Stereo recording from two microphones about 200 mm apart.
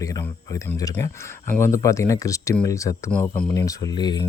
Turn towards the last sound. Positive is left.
turn(degrees=20)  # may be behind; listen again after turning